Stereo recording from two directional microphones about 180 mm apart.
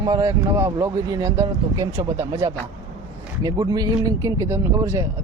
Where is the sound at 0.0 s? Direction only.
20° right (ahead or behind).